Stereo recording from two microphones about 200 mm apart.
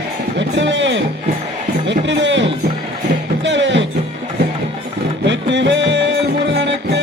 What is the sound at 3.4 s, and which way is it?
Music, 65° right (ahead or behind).